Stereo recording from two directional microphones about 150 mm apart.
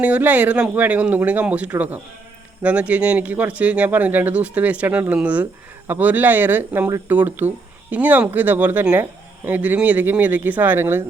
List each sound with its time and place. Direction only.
0.0 s speech: 10° right (ahead or behind)